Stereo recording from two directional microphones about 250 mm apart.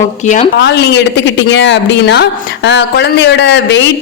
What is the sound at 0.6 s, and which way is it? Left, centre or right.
Speech, left.